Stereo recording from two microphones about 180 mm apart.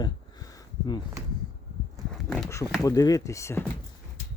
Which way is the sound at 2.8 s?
20° left (ahead or behind).